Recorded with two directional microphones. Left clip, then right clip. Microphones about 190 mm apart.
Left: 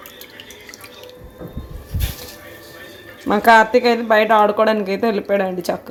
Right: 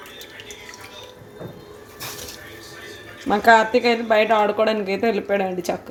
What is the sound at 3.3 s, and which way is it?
Speech, 20° left (ahead or behind).